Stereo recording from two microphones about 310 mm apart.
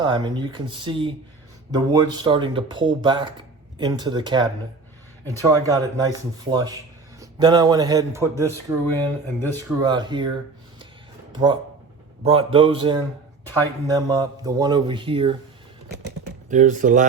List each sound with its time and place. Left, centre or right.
0.0 s speech: centre
16.5 s speech: right